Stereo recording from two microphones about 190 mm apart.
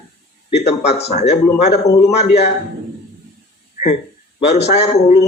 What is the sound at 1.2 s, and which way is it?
Speech, 60° left (ahead or behind).